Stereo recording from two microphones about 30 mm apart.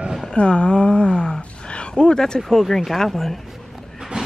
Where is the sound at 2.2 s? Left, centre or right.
Left.